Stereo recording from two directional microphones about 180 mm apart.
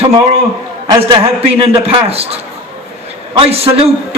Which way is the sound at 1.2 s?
30° right (ahead or behind).